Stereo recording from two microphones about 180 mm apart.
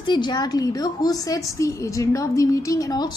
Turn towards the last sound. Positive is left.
turn(degrees=20)  # may be behind; listen again after turning